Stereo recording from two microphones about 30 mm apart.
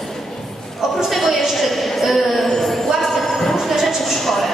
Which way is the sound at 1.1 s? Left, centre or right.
Centre.